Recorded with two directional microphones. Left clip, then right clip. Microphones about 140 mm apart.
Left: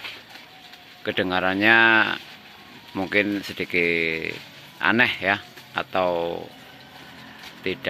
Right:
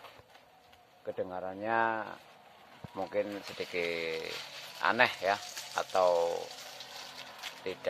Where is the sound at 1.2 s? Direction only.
25° left (ahead or behind).